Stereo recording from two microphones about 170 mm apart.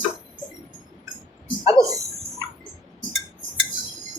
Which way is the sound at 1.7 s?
20° right (ahead or behind).